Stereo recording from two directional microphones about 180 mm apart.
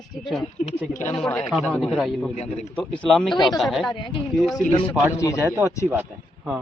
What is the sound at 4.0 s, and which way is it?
Speech, 25° left (ahead or behind).